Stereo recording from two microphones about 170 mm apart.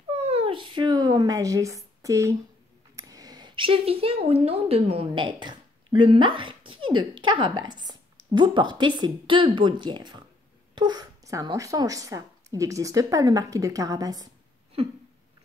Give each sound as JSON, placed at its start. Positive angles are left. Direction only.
{"t": 0.2, "sound": "cat", "side_deg": -35}
{"t": 3.0, "sound": "speech", "side_deg": -20}
{"t": 14.8, "sound": "a sound", "side_deg": -35}